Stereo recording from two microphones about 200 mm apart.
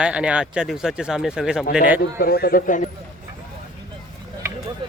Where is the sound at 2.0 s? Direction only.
50° left (ahead or behind).